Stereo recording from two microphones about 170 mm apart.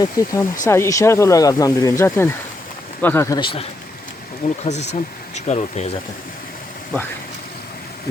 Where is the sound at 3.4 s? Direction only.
30° left (ahead or behind).